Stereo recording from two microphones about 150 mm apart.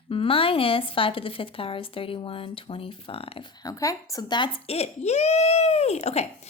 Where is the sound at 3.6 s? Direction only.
20° left (ahead or behind).